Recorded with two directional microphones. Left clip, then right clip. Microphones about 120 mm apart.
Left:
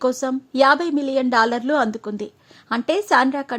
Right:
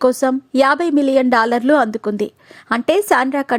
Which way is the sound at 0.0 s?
45° right (ahead or behind).